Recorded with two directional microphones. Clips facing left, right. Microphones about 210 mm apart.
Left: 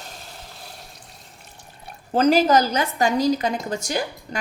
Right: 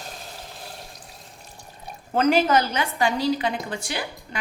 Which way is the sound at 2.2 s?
35° left (ahead or behind).